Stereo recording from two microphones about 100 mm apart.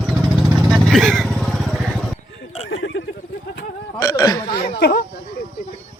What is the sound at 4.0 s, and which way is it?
Hiccup, 35° left (ahead or behind).